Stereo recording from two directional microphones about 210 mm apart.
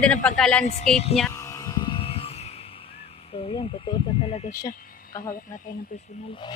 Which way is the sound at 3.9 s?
20° left (ahead or behind).